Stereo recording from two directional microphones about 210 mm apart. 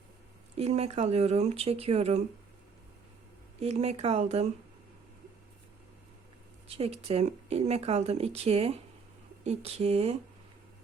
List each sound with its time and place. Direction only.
0.5 s speech: 30° right (ahead or behind)
3.6 s speech: 30° right (ahead or behind)
6.7 s speech: 30° right (ahead or behind)